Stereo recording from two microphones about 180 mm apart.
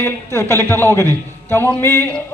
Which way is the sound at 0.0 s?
15° left (ahead or behind).